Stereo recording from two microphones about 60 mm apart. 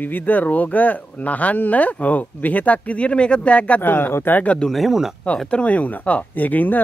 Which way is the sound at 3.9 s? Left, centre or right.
Left.